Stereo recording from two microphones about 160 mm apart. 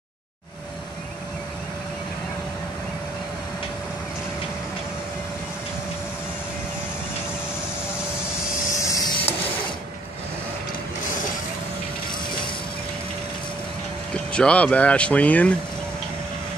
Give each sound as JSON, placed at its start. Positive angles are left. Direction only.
{"t": 8.8, "sound": "printer", "side_deg": 20}
{"t": 14.3, "sound": "speech", "side_deg": 5}